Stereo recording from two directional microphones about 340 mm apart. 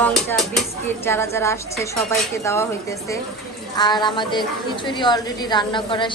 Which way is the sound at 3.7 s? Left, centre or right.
Centre.